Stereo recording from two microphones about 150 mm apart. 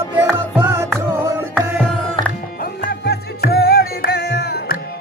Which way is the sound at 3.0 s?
90° left.